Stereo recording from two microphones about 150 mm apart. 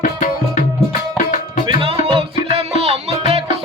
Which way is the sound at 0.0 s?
60° left (ahead or behind).